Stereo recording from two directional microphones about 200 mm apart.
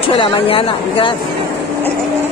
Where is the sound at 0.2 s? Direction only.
25° left (ahead or behind).